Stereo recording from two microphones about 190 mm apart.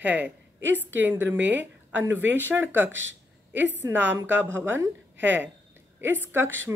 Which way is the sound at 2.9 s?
90° right.